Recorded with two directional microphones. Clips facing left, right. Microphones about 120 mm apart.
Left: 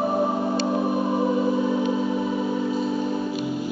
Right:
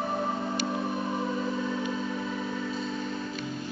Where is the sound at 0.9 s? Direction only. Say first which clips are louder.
Left 8 dB; 30° left (ahead or behind).